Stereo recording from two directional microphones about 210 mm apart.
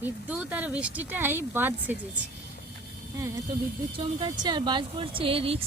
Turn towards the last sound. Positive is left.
turn(degrees=-25)  # may be behind; listen again after turning